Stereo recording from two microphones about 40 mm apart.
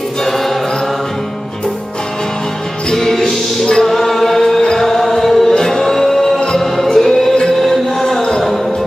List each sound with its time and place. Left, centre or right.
2.9 s music: centre
4.7 s chant: centre
5.6 s music: centre